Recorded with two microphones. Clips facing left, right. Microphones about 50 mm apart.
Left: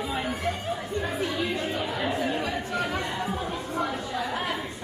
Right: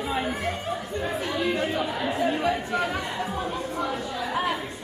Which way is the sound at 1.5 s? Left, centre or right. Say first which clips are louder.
Right 3 dB; right.